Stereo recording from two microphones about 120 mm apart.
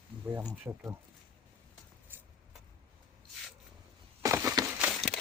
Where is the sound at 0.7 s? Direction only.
20° right (ahead or behind).